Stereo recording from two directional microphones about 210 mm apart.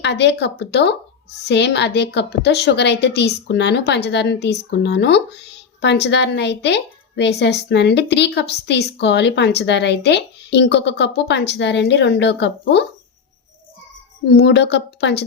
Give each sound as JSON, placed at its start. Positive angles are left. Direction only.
{"t": 0.0, "sound": "a woman's voice", "side_deg": 55}
{"t": 14.3, "sound": "a woman's voice", "side_deg": 55}